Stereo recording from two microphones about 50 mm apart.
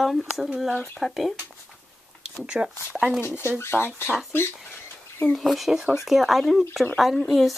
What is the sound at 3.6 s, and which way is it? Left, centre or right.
Speech, left.